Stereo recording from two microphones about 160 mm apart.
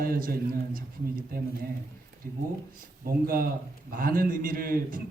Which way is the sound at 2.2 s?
60° right (ahead or behind).